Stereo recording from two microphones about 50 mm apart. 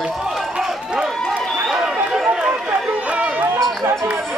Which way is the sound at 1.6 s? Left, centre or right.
Centre.